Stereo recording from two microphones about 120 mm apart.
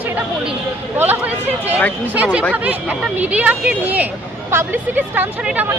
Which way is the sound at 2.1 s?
10° right (ahead or behind).